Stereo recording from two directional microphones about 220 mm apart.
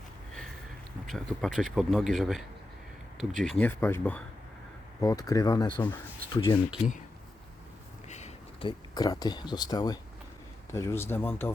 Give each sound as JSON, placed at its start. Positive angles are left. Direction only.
{"t": 1.0, "sound": "speech", "side_deg": 0}
{"t": 8.0, "sound": "a sound", "side_deg": 30}
{"t": 9.0, "sound": "speech", "side_deg": 15}